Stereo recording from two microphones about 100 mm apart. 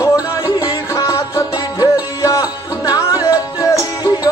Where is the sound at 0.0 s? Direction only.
35° left (ahead or behind).